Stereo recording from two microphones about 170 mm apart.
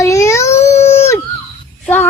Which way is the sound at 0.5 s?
40° left (ahead or behind).